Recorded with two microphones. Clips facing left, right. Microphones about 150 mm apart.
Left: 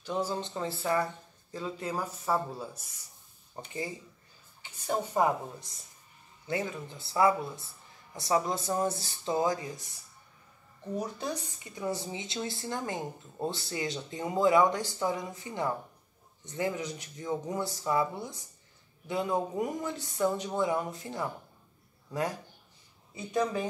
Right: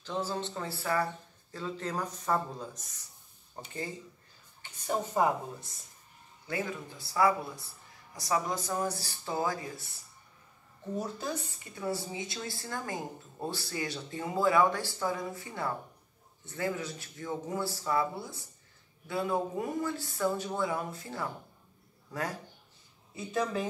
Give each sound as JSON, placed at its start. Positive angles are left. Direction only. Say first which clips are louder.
{"t": 0.0, "sound": "speech", "louder": "left 2 dB", "side_deg": 15}
{"t": 4.6, "sound": "a sound", "louder": "left 1 dB", "side_deg": 10}
{"t": 6.4, "sound": "a woman's voice", "louder": "left 2 dB", "side_deg": 25}
{"t": 11.2, "sound": "a woman's voice", "louder": "left 1 dB", "side_deg": 20}